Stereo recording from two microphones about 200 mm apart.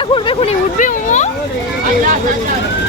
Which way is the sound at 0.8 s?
40° left (ahead or behind).